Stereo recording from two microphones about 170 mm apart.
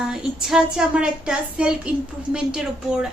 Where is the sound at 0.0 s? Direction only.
5° right (ahead or behind).